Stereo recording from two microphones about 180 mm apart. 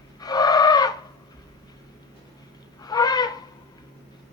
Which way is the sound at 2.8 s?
20° left (ahead or behind).